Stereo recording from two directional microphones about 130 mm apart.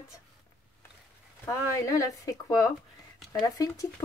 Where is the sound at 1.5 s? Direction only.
25° left (ahead or behind).